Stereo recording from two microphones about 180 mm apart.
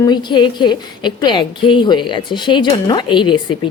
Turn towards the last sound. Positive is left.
turn(degrees=25)  # may be behind; listen again after turning